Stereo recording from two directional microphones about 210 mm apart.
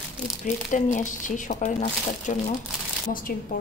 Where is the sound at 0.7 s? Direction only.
35° left (ahead or behind).